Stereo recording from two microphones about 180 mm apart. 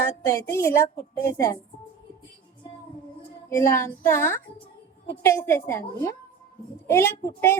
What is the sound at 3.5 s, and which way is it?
A woman's voice, 15° left (ahead or behind).